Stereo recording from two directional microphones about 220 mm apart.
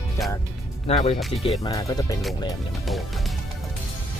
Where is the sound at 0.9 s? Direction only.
25° left (ahead or behind).